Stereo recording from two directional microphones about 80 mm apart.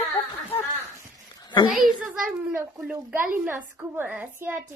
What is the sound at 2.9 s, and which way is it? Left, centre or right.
A woman's voice, centre.